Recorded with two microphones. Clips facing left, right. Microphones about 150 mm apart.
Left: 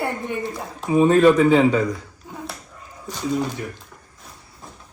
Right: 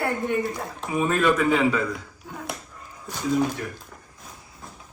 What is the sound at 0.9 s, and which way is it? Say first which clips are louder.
Speech: left 8 dB; 30° left (ahead or behind).